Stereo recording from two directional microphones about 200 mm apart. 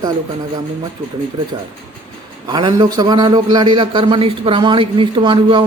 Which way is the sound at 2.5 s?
20° right (ahead or behind).